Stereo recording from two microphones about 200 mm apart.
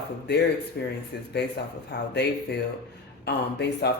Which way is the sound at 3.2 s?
55° left (ahead or behind).